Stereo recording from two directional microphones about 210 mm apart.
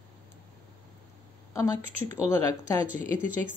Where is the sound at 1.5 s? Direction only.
15° left (ahead or behind).